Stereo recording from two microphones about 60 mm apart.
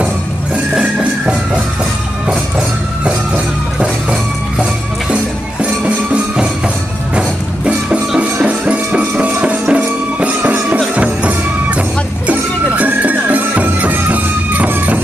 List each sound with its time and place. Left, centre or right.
0.7 s music: right
3.8 s music: centre
12.7 s music: right